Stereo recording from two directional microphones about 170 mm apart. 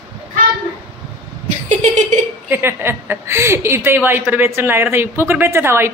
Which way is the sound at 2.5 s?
15° right (ahead or behind).